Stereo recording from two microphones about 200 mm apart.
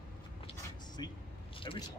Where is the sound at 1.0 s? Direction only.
20° left (ahead or behind).